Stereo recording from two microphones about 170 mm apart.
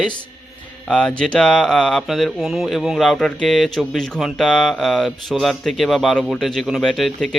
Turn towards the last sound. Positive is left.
turn(degrees=0)  # may be behind; listen again after turning